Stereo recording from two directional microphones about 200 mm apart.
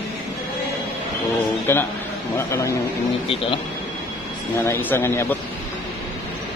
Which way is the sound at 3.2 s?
30° left (ahead or behind).